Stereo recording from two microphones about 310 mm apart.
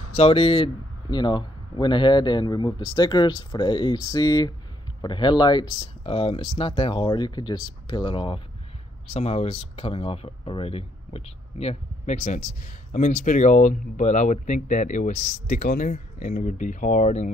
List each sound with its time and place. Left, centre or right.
0.1 s a man's voice: centre